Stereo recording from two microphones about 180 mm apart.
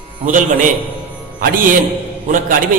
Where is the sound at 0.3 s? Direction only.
45° right (ahead or behind).